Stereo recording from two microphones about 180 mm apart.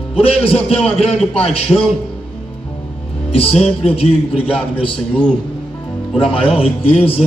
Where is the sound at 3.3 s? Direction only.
35° left (ahead or behind).